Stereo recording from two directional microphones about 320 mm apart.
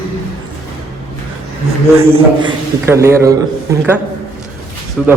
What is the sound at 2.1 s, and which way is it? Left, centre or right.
A man's voice, centre.